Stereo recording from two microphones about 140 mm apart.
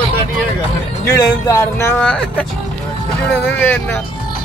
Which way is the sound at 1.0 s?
25° left (ahead or behind).